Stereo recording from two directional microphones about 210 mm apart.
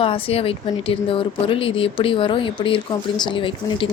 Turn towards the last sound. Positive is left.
turn(degrees=25)  # may be behind; listen again after turning